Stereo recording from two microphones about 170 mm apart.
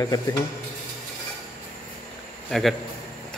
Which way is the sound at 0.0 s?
20° left (ahead or behind).